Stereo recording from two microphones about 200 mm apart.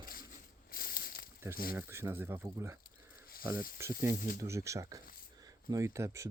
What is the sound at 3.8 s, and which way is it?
Speech, 15° right (ahead or behind).